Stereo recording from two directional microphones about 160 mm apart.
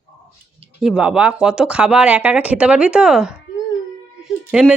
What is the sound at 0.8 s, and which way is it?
Speech, 5° right (ahead or behind).